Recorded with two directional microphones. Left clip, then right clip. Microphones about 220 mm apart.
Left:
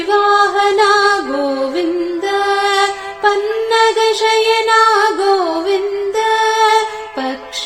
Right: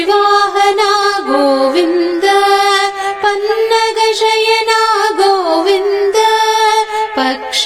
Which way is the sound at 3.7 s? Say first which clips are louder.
Even; 15° right (ahead or behind).